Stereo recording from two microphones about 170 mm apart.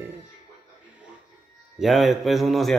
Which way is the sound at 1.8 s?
Centre (ahead or behind).